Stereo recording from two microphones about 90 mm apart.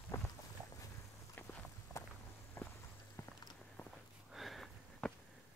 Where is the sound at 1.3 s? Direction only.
25° left (ahead or behind).